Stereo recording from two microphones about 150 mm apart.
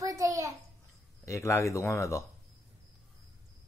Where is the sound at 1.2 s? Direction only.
20° left (ahead or behind).